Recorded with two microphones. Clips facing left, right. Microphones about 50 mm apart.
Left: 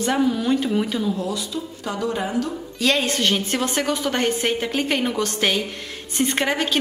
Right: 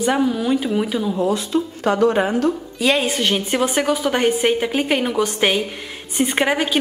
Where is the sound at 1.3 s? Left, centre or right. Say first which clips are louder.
Right 8 dB; right.